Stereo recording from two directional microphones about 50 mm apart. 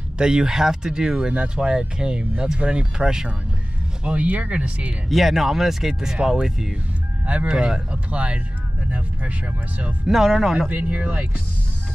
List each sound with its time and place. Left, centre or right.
0.2 s speech: centre
4.0 s speech: right
5.1 s speech: centre; by 8.4 s right
10.0 s speech: centre
10.7 s speech: right